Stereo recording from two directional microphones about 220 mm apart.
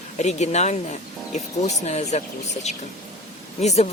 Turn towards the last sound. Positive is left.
turn(degrees=30)  # may be behind; listen again after turning